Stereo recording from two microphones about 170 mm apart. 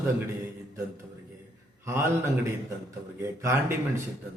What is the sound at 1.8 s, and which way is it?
Speech, 15° right (ahead or behind).